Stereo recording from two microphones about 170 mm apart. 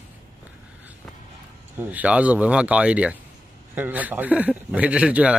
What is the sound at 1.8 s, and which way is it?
Speech, 10° right (ahead or behind).